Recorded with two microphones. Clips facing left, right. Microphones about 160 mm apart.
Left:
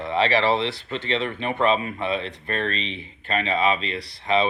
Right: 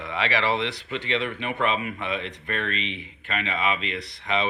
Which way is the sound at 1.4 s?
35° left (ahead or behind).